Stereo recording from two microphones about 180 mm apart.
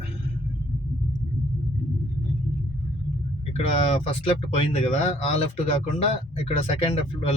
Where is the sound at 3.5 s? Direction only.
35° left (ahead or behind).